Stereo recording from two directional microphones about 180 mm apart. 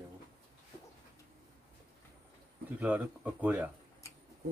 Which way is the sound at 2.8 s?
10° right (ahead or behind).